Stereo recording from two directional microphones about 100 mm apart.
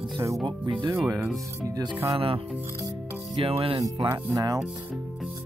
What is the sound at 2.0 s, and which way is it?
Speech, 70° right (ahead or behind).